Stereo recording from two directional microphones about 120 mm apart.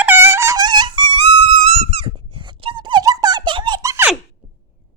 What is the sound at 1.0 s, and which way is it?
Music, 60° right (ahead or behind).